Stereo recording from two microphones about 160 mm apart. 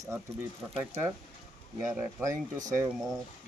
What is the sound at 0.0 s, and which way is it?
Speech, 15° right (ahead or behind).